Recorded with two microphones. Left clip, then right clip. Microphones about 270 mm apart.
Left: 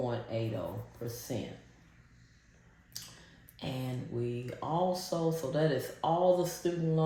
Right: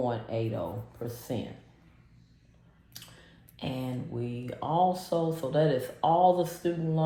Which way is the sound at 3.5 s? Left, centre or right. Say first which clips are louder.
Right 4 dB; centre.